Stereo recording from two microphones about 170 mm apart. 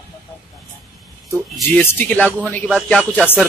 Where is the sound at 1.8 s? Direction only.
10° left (ahead or behind).